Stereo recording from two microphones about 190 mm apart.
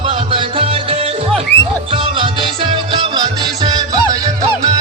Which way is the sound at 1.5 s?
10° left (ahead or behind).